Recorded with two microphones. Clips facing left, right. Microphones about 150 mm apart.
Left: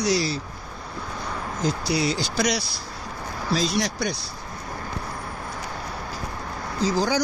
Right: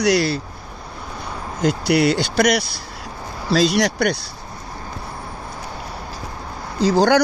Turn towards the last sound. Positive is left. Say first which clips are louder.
# right 8 dB
turn(degrees=-70)  # may be behind; listen again after turning